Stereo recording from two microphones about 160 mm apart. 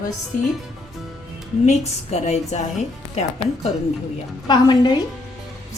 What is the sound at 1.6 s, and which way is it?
A woman's voice, 45° left (ahead or behind).